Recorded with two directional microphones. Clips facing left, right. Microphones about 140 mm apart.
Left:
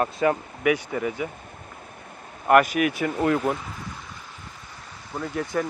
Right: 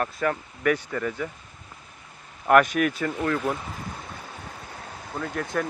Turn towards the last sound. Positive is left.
turn(degrees=5)  # may be behind; listen again after turning